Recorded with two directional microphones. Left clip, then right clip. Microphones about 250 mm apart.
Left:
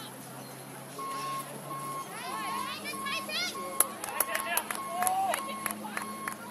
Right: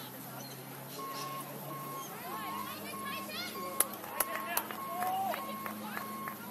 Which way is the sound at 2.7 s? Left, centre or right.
Left.